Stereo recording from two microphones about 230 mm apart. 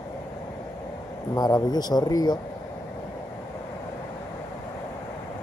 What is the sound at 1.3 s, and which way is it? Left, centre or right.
Speech, centre.